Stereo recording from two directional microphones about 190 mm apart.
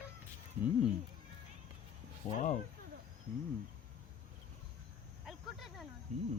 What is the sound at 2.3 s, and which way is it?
Speech, 40° left (ahead or behind).